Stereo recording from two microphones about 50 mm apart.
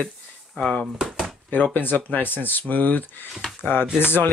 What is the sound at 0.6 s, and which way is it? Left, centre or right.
Speech, left.